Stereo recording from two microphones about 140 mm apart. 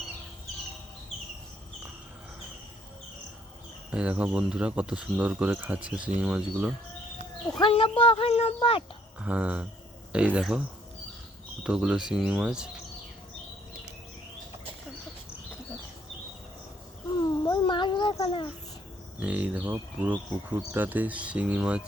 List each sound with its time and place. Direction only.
3.9 s speech: 10° right (ahead or behind)
7.6 s speech: 40° left (ahead or behind)
9.1 s speech: 10° right (ahead or behind)
11.6 s speech: 5° right (ahead or behind)
17.2 s a sound: 25° left (ahead or behind)
19.2 s speech: 10° right (ahead or behind)